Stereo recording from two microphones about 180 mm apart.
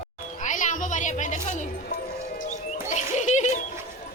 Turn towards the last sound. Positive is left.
turn(degrees=40)  # may be behind; listen again after turning